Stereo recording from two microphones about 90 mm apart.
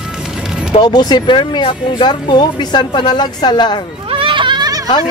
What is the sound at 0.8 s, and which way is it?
Speech, 50° left (ahead or behind).